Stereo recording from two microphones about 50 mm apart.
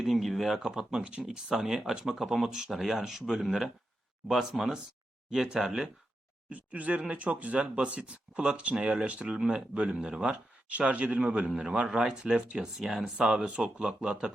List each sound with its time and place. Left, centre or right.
0.0 s speech: centre
6.5 s speech: right